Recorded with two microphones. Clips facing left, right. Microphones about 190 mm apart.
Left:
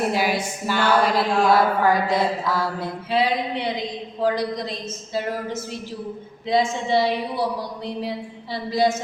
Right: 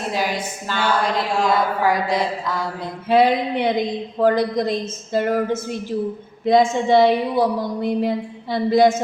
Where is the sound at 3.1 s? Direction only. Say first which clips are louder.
Right 6 dB; 50° right (ahead or behind).